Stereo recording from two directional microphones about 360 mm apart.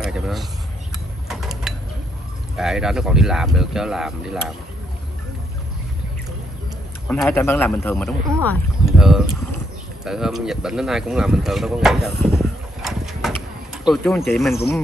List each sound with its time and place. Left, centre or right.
0.0 s speech: centre
1.3 s mechanisms: centre
2.5 s speech: centre
7.1 s speech: centre